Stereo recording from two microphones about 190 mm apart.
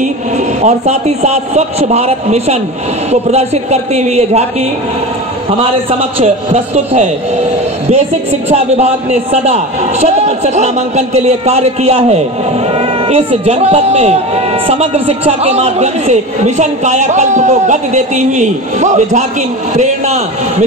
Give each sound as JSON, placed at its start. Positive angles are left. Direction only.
{"t": 0.6, "sound": "speech", "side_deg": -35}